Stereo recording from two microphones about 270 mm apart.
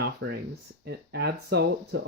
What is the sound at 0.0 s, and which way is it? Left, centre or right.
Speech, right.